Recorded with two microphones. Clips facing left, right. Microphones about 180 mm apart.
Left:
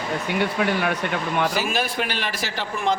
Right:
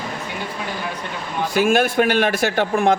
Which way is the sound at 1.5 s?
55° right (ahead or behind).